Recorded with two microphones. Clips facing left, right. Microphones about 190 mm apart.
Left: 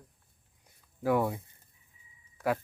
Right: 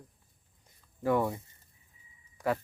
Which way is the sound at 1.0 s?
5° left (ahead or behind).